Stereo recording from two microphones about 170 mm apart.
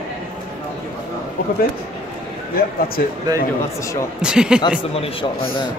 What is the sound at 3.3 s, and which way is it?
Speech, 25° right (ahead or behind).